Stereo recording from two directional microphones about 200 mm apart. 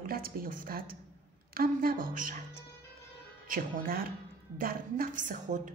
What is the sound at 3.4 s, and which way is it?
A woman's voice, 45° right (ahead or behind).